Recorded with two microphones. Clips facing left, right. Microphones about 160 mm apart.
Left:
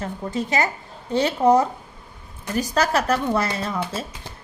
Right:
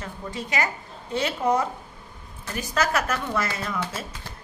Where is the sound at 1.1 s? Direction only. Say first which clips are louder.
Left 6 dB; 35° left (ahead or behind).